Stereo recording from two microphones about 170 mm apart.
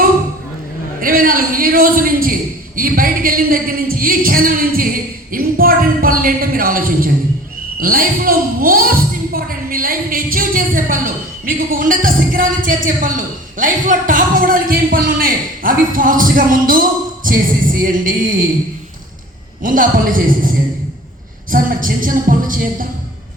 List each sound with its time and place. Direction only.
1.0 s a woman's voice: 55° right (ahead or behind)
17.2 s music: 55° right (ahead or behind)
19.6 s music: 55° right (ahead or behind)